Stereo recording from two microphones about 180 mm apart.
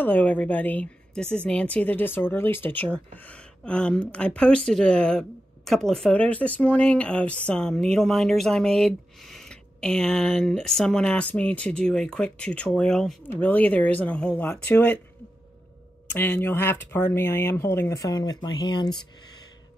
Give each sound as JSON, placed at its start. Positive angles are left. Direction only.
{"t": 0.0, "sound": "a woman's voice", "side_deg": 10}
{"t": 3.3, "sound": "a sound", "side_deg": 5}
{"t": 4.1, "sound": "a woman's voice", "side_deg": 5}
{"t": 16.1, "sound": "a woman's voice", "side_deg": 10}